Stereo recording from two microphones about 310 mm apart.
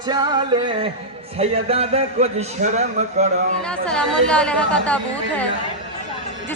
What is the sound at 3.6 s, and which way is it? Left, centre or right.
Speech, centre.